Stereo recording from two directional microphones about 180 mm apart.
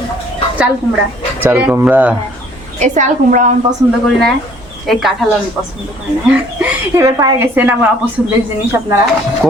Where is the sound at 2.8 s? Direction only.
40° right (ahead or behind).